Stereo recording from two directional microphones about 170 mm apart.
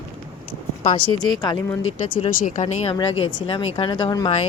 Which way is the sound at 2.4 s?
45° left (ahead or behind).